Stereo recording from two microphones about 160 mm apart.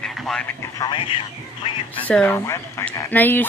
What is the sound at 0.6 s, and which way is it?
Speech, 25° left (ahead or behind).